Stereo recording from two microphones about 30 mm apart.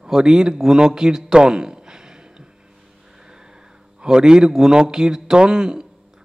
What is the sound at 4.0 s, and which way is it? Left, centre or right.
A man's voice, right.